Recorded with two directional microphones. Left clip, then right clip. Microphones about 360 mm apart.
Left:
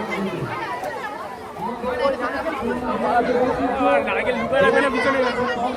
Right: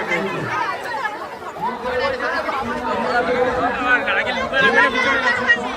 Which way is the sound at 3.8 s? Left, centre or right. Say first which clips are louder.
Even; centre.